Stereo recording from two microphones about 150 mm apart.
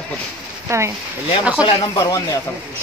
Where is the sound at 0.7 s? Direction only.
20° right (ahead or behind).